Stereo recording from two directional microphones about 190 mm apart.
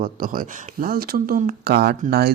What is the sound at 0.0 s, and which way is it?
Speech, 50° right (ahead or behind).